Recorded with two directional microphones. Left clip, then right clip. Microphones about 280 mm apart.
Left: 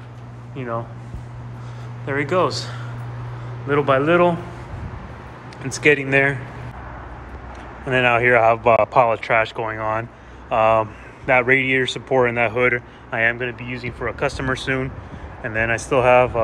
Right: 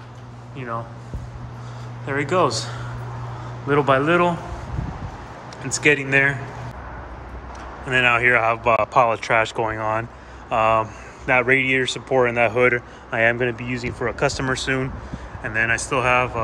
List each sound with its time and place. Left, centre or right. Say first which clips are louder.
0.6 s a man's voice: left 2 dB; centre
2.0 s speech: even; centre
5.6 s speech: left 1 dB; centre
7.8 s a man's voice: even; centre